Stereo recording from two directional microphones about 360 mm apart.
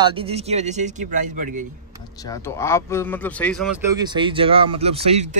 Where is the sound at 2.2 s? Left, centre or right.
Centre.